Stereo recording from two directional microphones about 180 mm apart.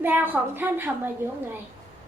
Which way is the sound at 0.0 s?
10° right (ahead or behind).